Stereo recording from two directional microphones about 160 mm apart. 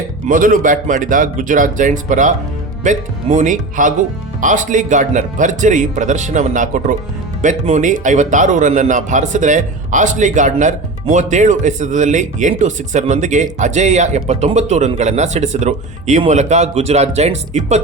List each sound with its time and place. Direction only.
0.3 s a man's voice: 60° right (ahead or behind)